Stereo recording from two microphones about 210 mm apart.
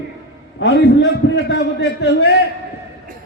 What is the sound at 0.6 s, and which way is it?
A man's voice, 60° left (ahead or behind).